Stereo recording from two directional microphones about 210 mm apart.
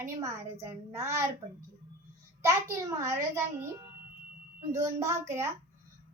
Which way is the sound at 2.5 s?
15° right (ahead or behind).